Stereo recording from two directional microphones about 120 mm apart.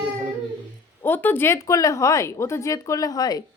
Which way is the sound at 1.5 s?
30° left (ahead or behind).